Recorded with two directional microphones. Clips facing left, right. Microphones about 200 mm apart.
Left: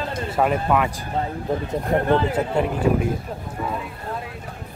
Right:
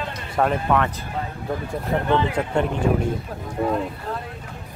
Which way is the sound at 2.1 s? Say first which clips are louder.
Even; 40° left (ahead or behind).